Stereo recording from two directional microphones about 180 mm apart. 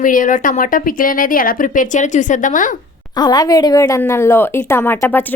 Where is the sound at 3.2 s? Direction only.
20° left (ahead or behind).